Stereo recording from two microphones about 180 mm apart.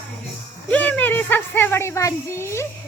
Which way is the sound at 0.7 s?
10° left (ahead or behind).